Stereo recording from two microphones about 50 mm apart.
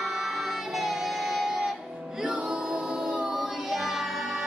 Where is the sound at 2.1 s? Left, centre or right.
Centre.